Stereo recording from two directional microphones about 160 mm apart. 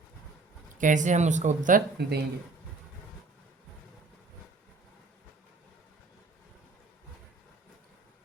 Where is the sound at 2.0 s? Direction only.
85° right.